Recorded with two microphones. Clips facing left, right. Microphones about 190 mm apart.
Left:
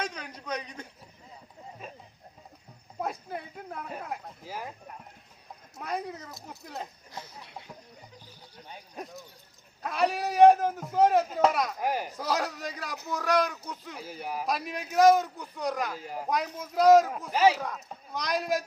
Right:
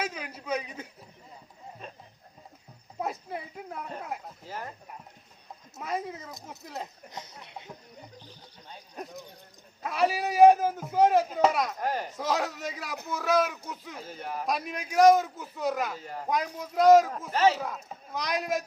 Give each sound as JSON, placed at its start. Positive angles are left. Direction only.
{"t": 0.0, "sound": "a man's voice", "side_deg": -5}
{"t": 1.8, "sound": "a sound", "side_deg": 5}
{"t": 3.0, "sound": "speech", "side_deg": 0}
{"t": 5.8, "sound": "speech", "side_deg": 0}
{"t": 7.1, "sound": "speech", "side_deg": -20}
{"t": 9.0, "sound": "speech", "side_deg": 0}
{"t": 11.8, "sound": "speech", "side_deg": 10}
{"t": 12.1, "sound": "speech", "side_deg": 0}
{"t": 17.3, "sound": "speech", "side_deg": 10}
{"t": 17.6, "sound": "speech", "side_deg": 0}